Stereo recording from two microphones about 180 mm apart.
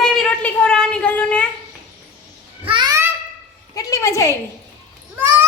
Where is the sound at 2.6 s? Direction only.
25° right (ahead or behind).